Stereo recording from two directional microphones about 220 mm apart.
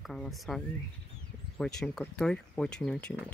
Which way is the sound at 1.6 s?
5° left (ahead or behind).